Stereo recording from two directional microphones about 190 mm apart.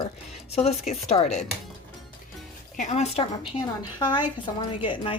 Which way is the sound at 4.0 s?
20° left (ahead or behind).